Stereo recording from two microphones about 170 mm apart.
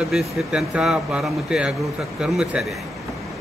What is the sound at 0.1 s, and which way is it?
Speech, centre (ahead or behind).